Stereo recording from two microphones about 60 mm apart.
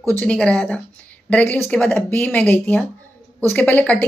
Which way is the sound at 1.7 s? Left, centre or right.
Centre.